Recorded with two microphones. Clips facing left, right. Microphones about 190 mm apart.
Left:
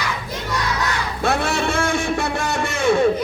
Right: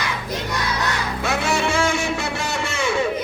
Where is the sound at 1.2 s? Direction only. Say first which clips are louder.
Left 2 dB; 55° left (ahead or behind).